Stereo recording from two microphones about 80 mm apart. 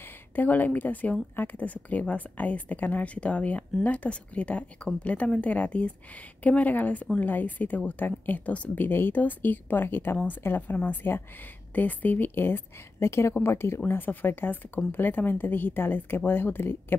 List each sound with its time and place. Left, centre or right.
0.4 s a woman's voice: left